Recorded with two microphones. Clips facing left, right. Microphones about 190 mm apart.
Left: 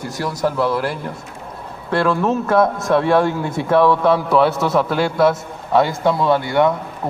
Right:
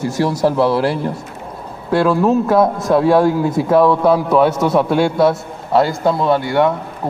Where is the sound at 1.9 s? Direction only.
5° right (ahead or behind).